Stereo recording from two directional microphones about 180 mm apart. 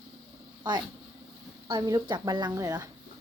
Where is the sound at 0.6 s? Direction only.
25° right (ahead or behind).